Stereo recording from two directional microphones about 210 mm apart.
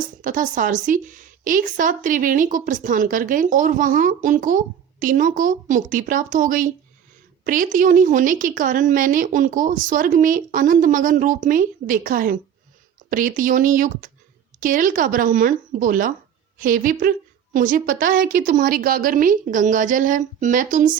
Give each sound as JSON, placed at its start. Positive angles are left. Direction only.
{"t": 0.0, "sound": "a woman's voice", "side_deg": -40}